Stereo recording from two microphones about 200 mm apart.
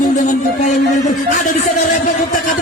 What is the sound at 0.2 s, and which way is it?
Music, 35° left (ahead or behind).